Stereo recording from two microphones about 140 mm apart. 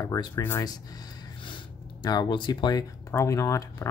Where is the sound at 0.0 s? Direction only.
25° left (ahead or behind).